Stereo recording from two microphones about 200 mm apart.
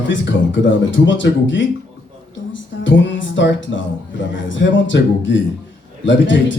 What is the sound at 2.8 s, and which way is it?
Music, 70° left (ahead or behind).